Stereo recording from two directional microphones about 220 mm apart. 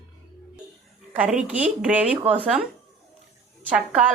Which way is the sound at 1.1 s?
5° right (ahead or behind).